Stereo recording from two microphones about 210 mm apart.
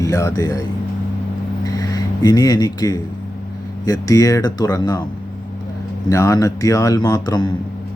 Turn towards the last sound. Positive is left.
turn(degrees=20)  # may be behind; listen again after turning